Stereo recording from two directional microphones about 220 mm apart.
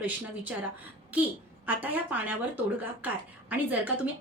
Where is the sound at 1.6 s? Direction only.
5° right (ahead or behind).